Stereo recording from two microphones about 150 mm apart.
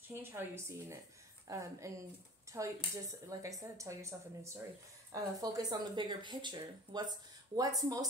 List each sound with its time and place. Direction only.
0.1 s a woman's voice: 15° right (ahead or behind)